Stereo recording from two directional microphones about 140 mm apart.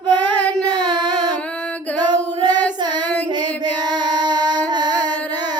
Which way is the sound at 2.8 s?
30° right (ahead or behind).